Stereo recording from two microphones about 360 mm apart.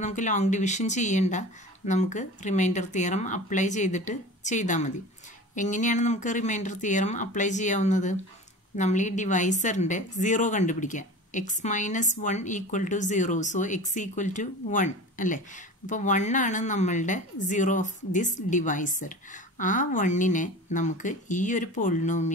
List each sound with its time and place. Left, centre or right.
0.0 s a woman's voice: centre